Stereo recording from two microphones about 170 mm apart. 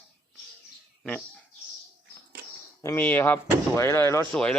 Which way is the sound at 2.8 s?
10° left (ahead or behind).